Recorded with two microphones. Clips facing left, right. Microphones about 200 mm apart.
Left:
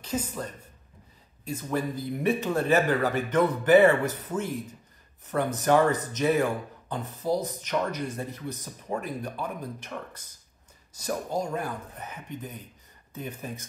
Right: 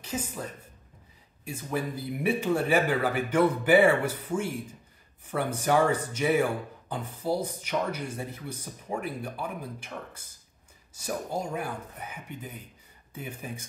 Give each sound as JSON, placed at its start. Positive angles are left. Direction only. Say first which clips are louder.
{"t": 0.0, "sound": "speech", "louder": "left 3 dB", "side_deg": -10}